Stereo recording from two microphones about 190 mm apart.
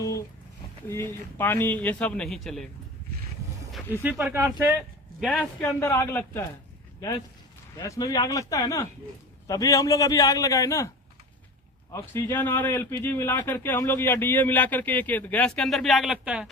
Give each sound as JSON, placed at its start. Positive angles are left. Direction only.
{"t": 1.4, "sound": "speech", "side_deg": 10}
{"t": 4.0, "sound": "speech", "side_deg": -10}
{"t": 5.2, "sound": "a man's voice", "side_deg": 5}
{"t": 5.8, "sound": "speech", "side_deg": 15}
{"t": 7.8, "sound": "speech", "side_deg": 15}